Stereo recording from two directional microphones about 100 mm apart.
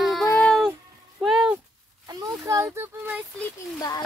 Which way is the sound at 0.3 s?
10° left (ahead or behind).